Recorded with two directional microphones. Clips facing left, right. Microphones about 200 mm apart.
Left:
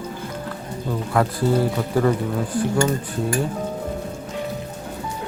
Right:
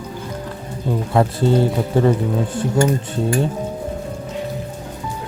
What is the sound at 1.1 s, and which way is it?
Speech, 25° right (ahead or behind).